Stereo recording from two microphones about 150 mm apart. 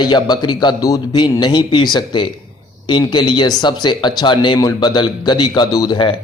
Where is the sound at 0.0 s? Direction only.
30° left (ahead or behind).